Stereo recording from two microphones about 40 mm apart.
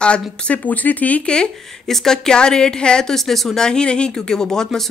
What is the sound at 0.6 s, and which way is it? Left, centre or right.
Speech, left.